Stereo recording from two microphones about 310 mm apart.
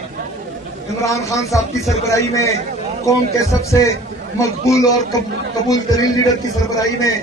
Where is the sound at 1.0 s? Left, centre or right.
Centre.